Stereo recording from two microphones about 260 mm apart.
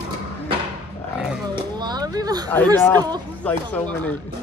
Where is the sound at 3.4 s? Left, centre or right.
Centre.